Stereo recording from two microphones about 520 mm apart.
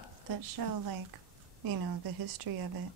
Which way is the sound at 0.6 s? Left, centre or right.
Right.